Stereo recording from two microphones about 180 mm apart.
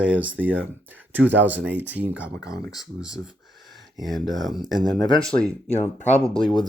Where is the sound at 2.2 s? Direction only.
70° right (ahead or behind).